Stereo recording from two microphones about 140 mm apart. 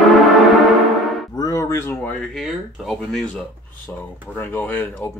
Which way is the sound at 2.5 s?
Centre (ahead or behind).